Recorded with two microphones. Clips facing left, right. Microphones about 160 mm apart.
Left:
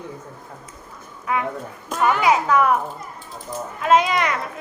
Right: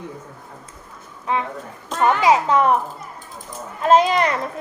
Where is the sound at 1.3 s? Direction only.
30° right (ahead or behind).